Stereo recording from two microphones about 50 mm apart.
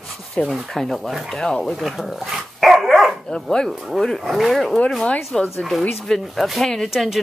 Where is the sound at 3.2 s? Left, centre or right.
Centre.